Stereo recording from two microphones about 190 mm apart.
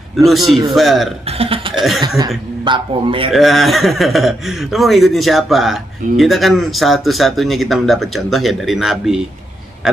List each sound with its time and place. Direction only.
0.1 s a man's voice: centre (ahead or behind)
1.8 s cough: centre (ahead or behind)
2.1 s a man's voice: 20° right (ahead or behind)
3.3 s a man's voice: centre (ahead or behind)